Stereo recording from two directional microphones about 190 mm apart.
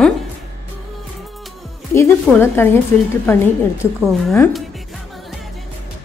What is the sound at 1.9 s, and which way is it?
A woman's voice, 15° left (ahead or behind).